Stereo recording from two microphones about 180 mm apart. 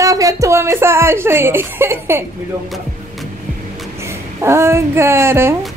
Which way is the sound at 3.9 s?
15° right (ahead or behind).